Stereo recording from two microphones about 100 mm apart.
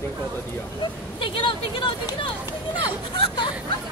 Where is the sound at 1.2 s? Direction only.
60° left (ahead or behind).